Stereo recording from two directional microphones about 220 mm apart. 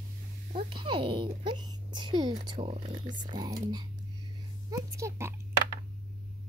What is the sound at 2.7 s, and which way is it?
Speech, 30° right (ahead or behind).